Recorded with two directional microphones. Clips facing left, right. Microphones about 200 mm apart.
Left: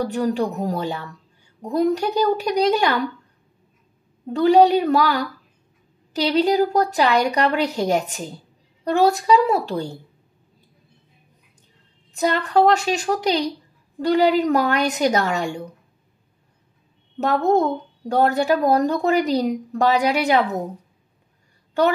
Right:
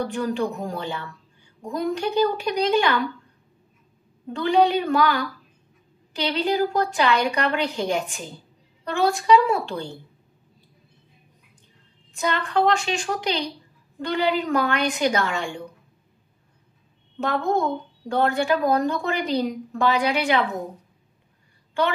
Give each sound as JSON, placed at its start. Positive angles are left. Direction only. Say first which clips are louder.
{"t": 0.0, "sound": "speech", "louder": "left 3 dB", "side_deg": 40}
{"t": 4.3, "sound": "speech", "louder": "left 5 dB", "side_deg": 40}
{"t": 12.1, "sound": "speech", "louder": "left 4 dB", "side_deg": 40}
{"t": 17.2, "sound": "speech", "louder": "left 5 dB", "side_deg": 40}